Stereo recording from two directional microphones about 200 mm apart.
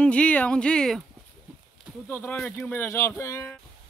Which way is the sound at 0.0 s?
5° left (ahead or behind).